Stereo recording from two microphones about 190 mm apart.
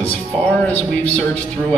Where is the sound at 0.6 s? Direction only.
10° left (ahead or behind).